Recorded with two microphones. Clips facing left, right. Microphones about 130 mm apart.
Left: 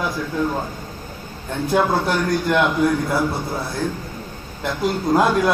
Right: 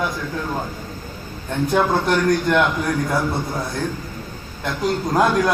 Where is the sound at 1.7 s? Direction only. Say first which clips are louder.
Even; 5° left (ahead or behind).